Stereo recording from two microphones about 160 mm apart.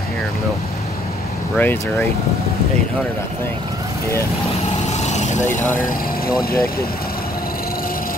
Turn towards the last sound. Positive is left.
turn(degrees=70)  # may be behind; listen again after turning